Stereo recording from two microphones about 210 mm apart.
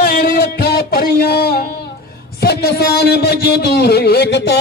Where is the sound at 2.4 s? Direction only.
50° left (ahead or behind).